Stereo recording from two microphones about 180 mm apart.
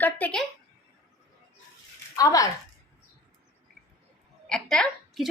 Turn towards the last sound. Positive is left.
turn(degrees=0)  # may be behind; listen again after turning